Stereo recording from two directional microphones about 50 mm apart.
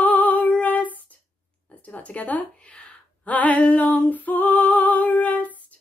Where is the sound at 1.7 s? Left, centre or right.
Left.